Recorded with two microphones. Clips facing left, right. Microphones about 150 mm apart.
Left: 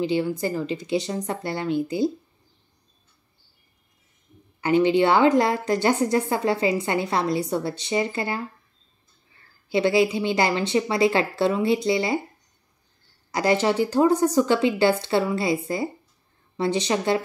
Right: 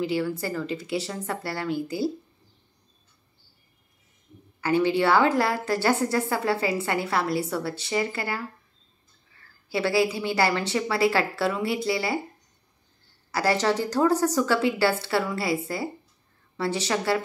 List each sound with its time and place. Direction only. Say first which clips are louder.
0.0 s a woman's voice: left 3 dB; 20° left (ahead or behind)
4.6 s a woman's voice: left 4 dB; 20° left (ahead or behind)
9.7 s a woman's voice: left 4 dB; 20° left (ahead or behind)
13.3 s a woman's voice: left 2 dB; 20° left (ahead or behind)